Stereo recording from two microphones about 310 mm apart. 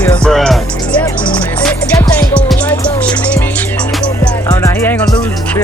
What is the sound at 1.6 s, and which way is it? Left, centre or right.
Music, centre.